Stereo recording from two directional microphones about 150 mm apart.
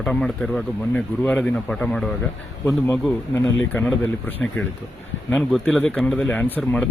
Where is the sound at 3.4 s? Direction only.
5° left (ahead or behind).